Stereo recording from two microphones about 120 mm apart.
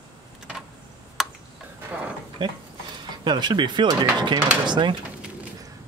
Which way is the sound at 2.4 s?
40° right (ahead or behind).